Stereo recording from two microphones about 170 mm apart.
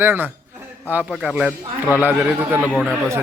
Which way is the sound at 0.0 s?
10° right (ahead or behind).